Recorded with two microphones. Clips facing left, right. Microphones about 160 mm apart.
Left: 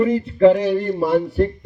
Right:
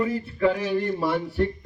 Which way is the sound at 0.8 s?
40° left (ahead or behind).